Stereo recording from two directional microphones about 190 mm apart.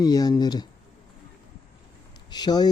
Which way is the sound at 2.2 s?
20° left (ahead or behind).